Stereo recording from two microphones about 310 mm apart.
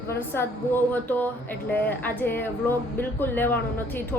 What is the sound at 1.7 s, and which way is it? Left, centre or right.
Speech, centre.